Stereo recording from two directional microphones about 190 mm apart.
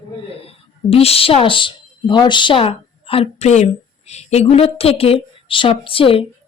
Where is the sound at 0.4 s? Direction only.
30° left (ahead or behind).